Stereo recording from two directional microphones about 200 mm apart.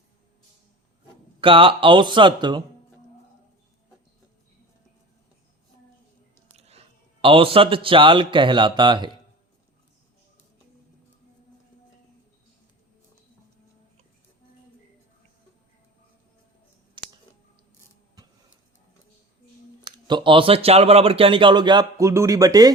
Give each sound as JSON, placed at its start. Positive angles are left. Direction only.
{"t": 1.4, "sound": "speech", "side_deg": -25}
{"t": 6.6, "sound": "a man's voice", "side_deg": -30}
{"t": 17.0, "sound": "a sound", "side_deg": -25}
{"t": 18.2, "sound": "tick-tock", "side_deg": -20}
{"t": 19.8, "sound": "speech", "side_deg": -20}